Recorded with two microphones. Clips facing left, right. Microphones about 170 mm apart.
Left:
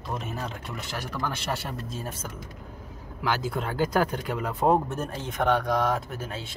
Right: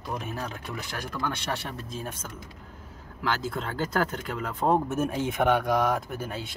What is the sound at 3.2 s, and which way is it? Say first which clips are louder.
Speech: left 2 dB; 10° left (ahead or behind).